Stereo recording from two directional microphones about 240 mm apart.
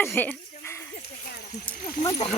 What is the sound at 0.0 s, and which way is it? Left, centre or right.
Speech, centre.